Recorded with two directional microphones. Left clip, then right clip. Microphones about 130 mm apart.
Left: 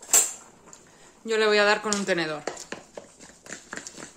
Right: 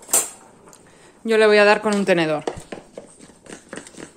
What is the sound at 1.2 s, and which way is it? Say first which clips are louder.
Speech: right 7 dB; 55° right (ahead or behind).